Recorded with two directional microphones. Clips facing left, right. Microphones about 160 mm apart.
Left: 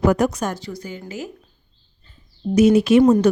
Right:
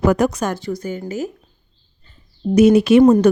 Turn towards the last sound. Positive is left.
turn(degrees=-65)  # may be behind; listen again after turning